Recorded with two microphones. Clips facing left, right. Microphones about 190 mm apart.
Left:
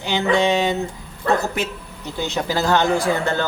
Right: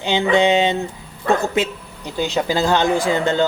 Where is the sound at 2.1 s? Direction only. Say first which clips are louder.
Right 3 dB; 15° right (ahead or behind).